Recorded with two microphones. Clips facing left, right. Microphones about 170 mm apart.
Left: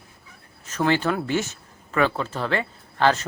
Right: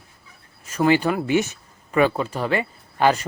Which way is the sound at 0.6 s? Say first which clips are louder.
Right 4 dB; 10° right (ahead or behind).